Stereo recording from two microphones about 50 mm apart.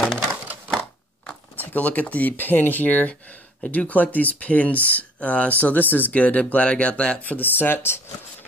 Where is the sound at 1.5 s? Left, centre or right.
Left.